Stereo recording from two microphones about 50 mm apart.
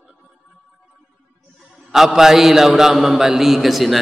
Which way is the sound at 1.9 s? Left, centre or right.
Centre.